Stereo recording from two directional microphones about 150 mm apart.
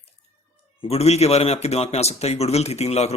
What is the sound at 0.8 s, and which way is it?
A man's voice, 45° left (ahead or behind).